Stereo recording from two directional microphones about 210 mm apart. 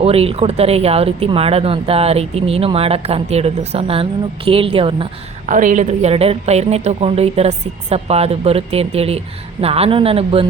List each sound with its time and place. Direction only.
0.0 s a woman's voice: 30° right (ahead or behind)
5.5 s a woman's voice: 40° right (ahead or behind)